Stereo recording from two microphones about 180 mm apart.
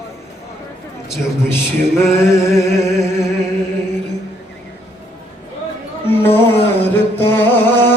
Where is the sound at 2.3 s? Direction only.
15° left (ahead or behind).